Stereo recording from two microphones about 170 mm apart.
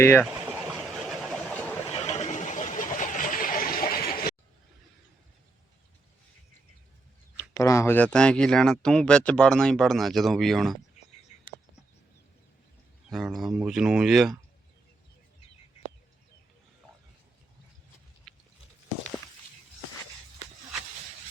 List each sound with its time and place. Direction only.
0.0 s speech: 10° left (ahead or behind)
0.8 s a sound: centre (ahead or behind)
1.9 s a sound: 40° left (ahead or behind); by 4.4 s 60° left (ahead or behind)
7.3 s speech: 20° left (ahead or behind); by 10.8 s centre (ahead or behind)
13.1 s speech: centre (ahead or behind)
18.3 s chewing: centre (ahead or behind)